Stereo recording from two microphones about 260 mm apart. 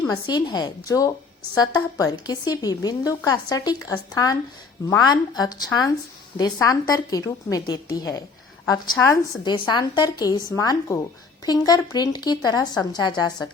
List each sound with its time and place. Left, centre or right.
0.1 s a woman's voice: centre